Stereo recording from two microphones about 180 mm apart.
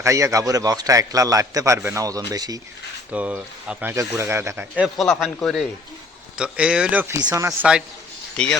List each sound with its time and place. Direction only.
0.0 s a man's voice: 15° right (ahead or behind)
3.1 s speech: 10° right (ahead or behind)
4.8 s speech: centre (ahead or behind)
8.4 s speech: 5° left (ahead or behind)